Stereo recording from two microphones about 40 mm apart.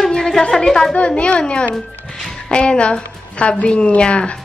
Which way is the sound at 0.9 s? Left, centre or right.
Left.